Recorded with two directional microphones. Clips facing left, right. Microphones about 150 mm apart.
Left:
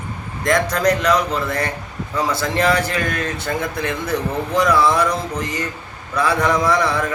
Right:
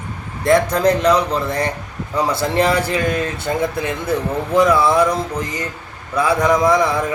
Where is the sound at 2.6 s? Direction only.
20° right (ahead or behind).